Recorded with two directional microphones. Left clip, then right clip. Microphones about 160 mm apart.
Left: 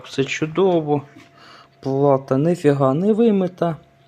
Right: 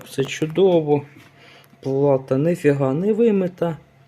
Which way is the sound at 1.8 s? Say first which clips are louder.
Left 1 dB; 10° left (ahead or behind).